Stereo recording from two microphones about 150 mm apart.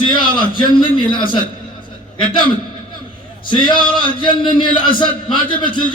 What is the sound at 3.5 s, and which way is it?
A man's voice, 30° left (ahead or behind).